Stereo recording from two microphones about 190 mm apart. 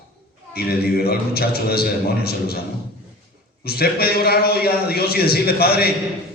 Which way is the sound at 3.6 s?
55° left (ahead or behind).